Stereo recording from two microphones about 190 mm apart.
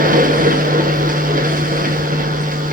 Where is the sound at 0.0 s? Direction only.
45° right (ahead or behind).